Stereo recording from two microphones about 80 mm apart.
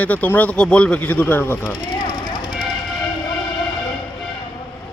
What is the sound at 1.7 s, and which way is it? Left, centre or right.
Vehicle, left.